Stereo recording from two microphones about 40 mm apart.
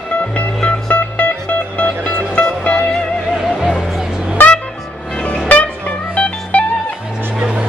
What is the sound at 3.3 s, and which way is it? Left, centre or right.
Music, centre.